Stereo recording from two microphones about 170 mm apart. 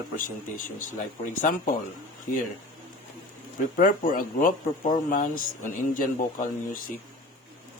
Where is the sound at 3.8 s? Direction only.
55° left (ahead or behind).